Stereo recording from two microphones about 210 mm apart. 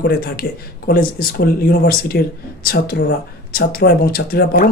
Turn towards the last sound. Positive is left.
turn(degrees=45)  # may be behind; listen again after turning